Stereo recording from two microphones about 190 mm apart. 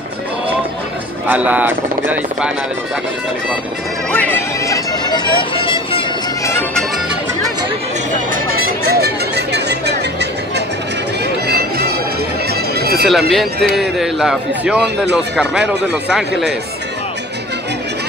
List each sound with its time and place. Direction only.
1.2 s speech: 10° right (ahead or behind)
4.1 s music: 10° left (ahead or behind); by 6.0 s 30° left (ahead or behind)
8.8 s music: 55° right (ahead or behind)
11.4 s music: 55° right (ahead or behind)
13.3 s a man's voice: centre (ahead or behind)